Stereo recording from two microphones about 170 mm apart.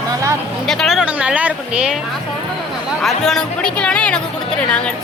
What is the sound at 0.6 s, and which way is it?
Speech, centre (ahead or behind).